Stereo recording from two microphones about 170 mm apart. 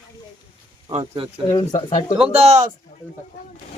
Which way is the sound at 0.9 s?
40° right (ahead or behind).